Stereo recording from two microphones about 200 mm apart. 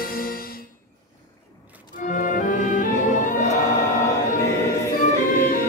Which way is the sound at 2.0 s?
40° left (ahead or behind).